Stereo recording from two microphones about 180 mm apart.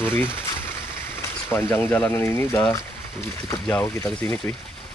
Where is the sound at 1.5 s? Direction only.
10° left (ahead or behind).